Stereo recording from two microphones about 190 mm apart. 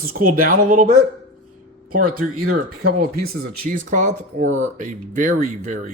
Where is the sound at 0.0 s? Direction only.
50° right (ahead or behind).